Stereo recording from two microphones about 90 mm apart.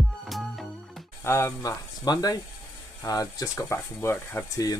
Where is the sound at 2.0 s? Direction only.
45° left (ahead or behind); by 4.5 s 25° left (ahead or behind).